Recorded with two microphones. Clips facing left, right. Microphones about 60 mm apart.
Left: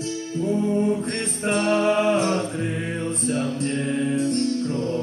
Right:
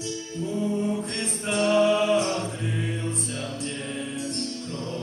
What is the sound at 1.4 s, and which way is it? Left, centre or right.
A capella, left.